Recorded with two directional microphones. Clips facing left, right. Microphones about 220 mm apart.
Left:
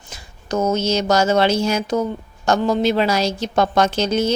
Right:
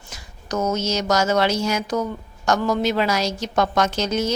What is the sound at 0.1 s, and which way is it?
Speech, 30° left (ahead or behind).